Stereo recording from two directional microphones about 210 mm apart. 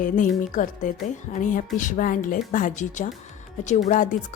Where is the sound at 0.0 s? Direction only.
40° left (ahead or behind).